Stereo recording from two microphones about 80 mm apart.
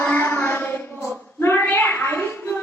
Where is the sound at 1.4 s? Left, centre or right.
Left.